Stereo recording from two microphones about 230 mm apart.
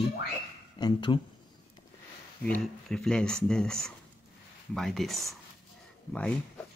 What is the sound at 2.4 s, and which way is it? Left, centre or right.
Speech, centre.